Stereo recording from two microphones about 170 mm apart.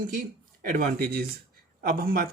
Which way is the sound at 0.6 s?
60° right (ahead or behind).